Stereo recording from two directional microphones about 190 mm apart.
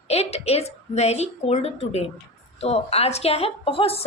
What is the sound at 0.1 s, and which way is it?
A woman's voice, 35° left (ahead or behind).